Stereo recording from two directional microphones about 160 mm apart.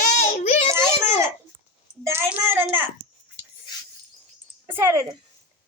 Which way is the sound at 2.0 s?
15° right (ahead or behind).